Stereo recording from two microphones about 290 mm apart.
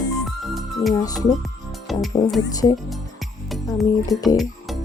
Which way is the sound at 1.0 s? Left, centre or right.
Centre.